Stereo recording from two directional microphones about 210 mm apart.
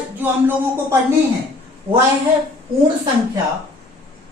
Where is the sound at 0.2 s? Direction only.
10° right (ahead or behind).